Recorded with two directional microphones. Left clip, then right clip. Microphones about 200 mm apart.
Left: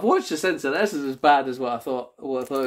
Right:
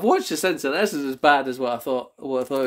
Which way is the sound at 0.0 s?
35° right (ahead or behind).